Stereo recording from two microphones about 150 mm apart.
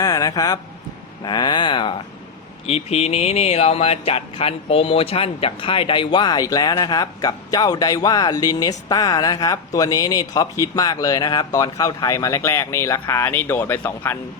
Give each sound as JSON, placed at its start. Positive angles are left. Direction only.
{"t": 0.0, "sound": "a man's voice", "side_deg": 25}
{"t": 2.6, "sound": "speech", "side_deg": 45}